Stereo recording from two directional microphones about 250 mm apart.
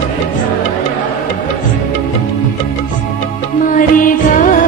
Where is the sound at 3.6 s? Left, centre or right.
Left.